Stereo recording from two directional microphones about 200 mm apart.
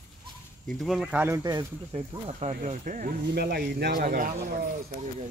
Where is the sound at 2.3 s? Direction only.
30° right (ahead or behind).